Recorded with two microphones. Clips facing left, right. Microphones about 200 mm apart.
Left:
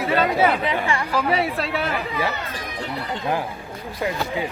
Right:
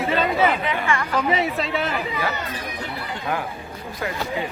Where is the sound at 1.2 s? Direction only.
Centre (ahead or behind).